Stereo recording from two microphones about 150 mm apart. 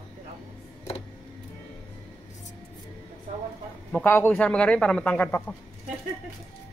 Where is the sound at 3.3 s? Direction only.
50° right (ahead or behind).